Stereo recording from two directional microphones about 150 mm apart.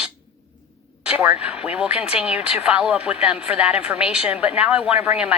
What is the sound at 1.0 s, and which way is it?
Speech, 10° right (ahead or behind).